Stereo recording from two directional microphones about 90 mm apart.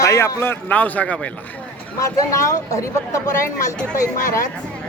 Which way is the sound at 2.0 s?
35° left (ahead or behind).